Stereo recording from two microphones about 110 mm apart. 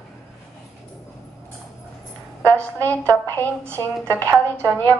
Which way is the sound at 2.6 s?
15° left (ahead or behind).